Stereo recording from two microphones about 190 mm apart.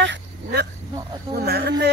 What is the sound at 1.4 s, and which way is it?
Speech, 60° right (ahead or behind).